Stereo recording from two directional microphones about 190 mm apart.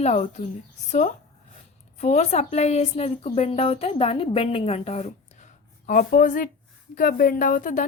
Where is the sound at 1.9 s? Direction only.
35° left (ahead or behind).